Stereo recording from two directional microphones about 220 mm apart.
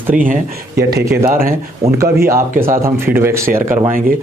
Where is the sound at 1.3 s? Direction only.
40° right (ahead or behind).